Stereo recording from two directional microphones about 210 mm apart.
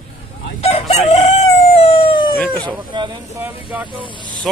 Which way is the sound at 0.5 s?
30° left (ahead or behind).